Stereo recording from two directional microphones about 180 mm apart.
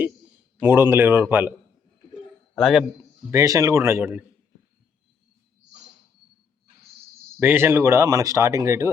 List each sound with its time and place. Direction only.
0.6 s speech: 10° right (ahead or behind)
2.6 s a man's voice: centre (ahead or behind)
3.2 s speech: 15° right (ahead or behind)
7.3 s speech: 10° right (ahead or behind)